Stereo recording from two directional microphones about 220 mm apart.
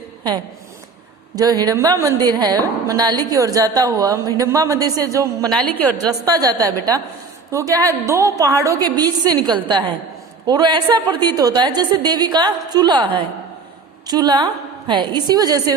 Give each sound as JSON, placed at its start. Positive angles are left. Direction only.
{"t": 1.4, "sound": "a woman's voice", "side_deg": -15}
{"t": 5.5, "sound": "a woman's voice", "side_deg": 5}
{"t": 6.0, "sound": "a woman's voice", "side_deg": -15}
{"t": 7.5, "sound": "a woman's voice", "side_deg": -15}